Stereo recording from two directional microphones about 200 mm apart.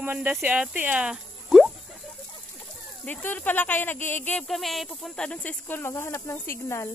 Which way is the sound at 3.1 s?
10° left (ahead or behind).